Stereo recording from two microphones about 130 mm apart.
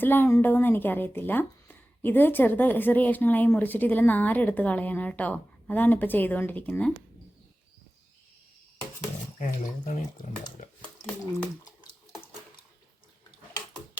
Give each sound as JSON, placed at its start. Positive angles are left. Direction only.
{"t": 0.0, "sound": "a woman's voice", "side_deg": 15}
{"t": 9.4, "sound": "speech", "side_deg": 90}
{"t": 9.9, "sound": "speech", "side_deg": 80}
{"t": 10.6, "sound": "a sound", "side_deg": 90}